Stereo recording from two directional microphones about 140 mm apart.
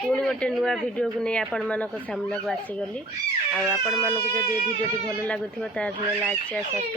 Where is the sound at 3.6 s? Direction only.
Centre (ahead or behind).